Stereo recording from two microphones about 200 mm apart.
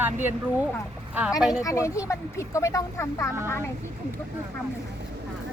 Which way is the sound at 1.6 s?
15° left (ahead or behind).